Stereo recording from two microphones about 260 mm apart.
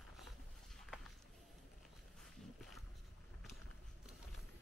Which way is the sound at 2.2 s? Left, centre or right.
Centre.